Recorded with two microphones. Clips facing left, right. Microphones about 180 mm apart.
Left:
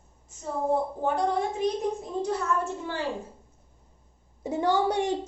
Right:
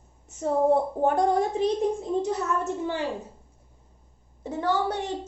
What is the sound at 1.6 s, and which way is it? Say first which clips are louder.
Speech: right 1 dB; 30° right (ahead or behind).